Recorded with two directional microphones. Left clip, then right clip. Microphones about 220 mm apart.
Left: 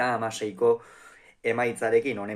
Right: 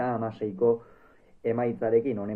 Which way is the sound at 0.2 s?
10° left (ahead or behind).